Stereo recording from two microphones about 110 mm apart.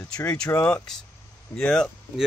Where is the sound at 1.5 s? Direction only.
5° left (ahead or behind).